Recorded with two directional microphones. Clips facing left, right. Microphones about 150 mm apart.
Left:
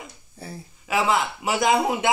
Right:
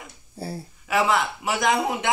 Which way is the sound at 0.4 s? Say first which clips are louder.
Right 5 dB; 30° right (ahead or behind).